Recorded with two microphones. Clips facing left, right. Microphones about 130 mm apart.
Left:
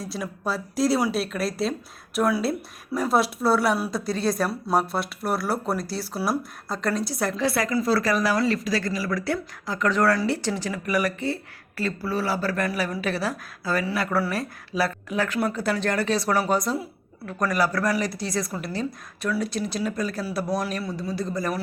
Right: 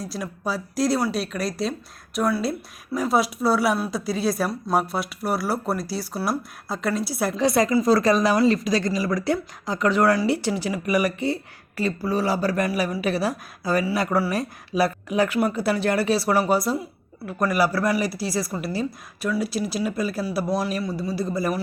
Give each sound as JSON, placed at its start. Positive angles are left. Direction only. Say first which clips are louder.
{"t": 0.0, "sound": "speech", "louder": "right 1 dB", "side_deg": 0}
{"t": 7.3, "sound": "a woman's voice", "louder": "right 6 dB", "side_deg": -20}